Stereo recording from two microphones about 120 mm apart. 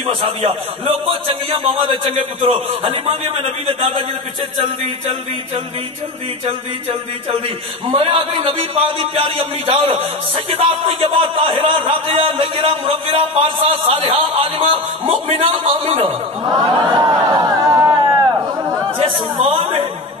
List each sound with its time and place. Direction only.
0.1 s a man's voice: 55° right (ahead or behind)
16.4 s a sound: 35° right (ahead or behind)
18.9 s speech: 45° right (ahead or behind)